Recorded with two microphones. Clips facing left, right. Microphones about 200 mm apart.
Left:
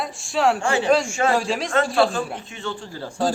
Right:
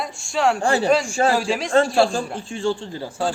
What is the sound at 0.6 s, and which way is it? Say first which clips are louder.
Speech: right 2 dB; 35° right (ahead or behind).